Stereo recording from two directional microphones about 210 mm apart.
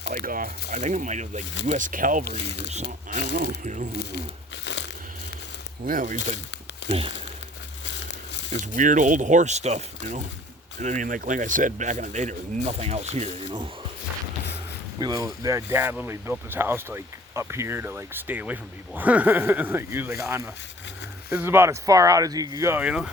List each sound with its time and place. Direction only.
0.1 s speech: 40° right (ahead or behind)
2.2 s speech: 50° left (ahead or behind)
3.3 s speech: 40° right (ahead or behind)
4.6 s crushing: 55° left (ahead or behind)
5.8 s speech: 40° right (ahead or behind)
6.8 s crumpling: 55° left (ahead or behind)
8.7 s speech: 40° right (ahead or behind)
14.9 s speech: 20° right (ahead or behind)